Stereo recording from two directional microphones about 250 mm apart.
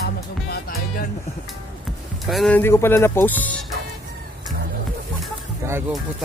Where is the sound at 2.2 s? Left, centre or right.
Centre.